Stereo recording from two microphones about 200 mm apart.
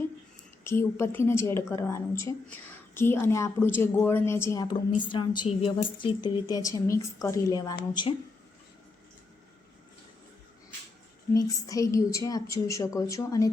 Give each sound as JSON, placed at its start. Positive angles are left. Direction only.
{"t": 0.6, "sound": "a woman's voice", "side_deg": 10}
{"t": 11.3, "sound": "a woman's voice", "side_deg": 20}